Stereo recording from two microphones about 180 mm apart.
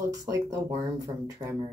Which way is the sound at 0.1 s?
20° right (ahead or behind).